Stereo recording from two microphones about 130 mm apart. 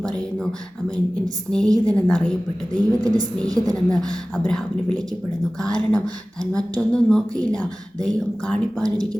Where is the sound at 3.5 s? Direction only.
30° right (ahead or behind).